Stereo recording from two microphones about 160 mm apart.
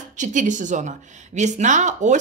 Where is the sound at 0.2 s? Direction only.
50° right (ahead or behind).